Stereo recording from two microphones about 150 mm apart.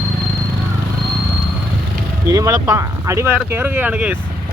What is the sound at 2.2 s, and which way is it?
Speech, 20° right (ahead or behind).